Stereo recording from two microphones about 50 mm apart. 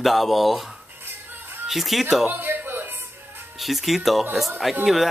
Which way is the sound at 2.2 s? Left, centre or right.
Right.